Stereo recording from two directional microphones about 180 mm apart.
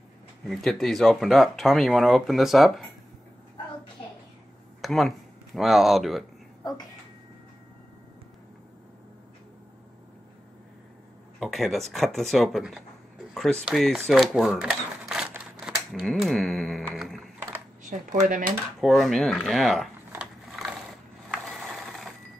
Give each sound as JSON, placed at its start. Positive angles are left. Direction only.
{"t": 0.5, "sound": "speech", "side_deg": 0}
{"t": 4.8, "sound": "speech", "side_deg": 0}
{"t": 11.3, "sound": "a sound", "side_deg": 0}
{"t": 11.9, "sound": "speech", "side_deg": 0}
{"t": 13.3, "sound": "a sound", "side_deg": 0}
{"t": 15.9, "sound": "speech", "side_deg": 0}
{"t": 16.8, "sound": "music", "side_deg": 0}
{"t": 17.8, "sound": "dishes", "side_deg": -45}
{"t": 18.8, "sound": "speech", "side_deg": 0}
{"t": 20.1, "sound": "a sound", "side_deg": -5}
{"t": 21.3, "sound": "mechanisms", "side_deg": 0}